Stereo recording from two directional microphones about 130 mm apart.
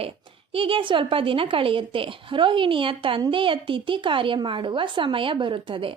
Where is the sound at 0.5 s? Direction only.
45° right (ahead or behind).